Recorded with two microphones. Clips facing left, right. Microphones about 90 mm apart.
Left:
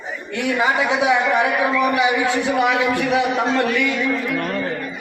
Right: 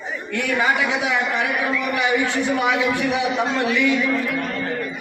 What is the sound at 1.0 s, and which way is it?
Speech, 25° left (ahead or behind).